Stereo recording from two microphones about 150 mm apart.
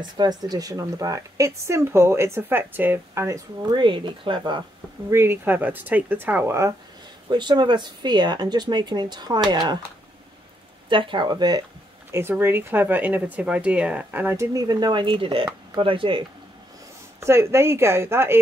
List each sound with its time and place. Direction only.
0.0 s speech: 30° right (ahead or behind)
3.8 s speech: 35° right (ahead or behind)
5.1 s speech: 15° right (ahead or behind)
7.2 s speech: 30° right (ahead or behind)
10.9 s speech: 35° right (ahead or behind)
12.1 s speech: 15° right (ahead or behind); by 16.3 s 35° right (ahead or behind)
17.2 s speech: 15° right (ahead or behind)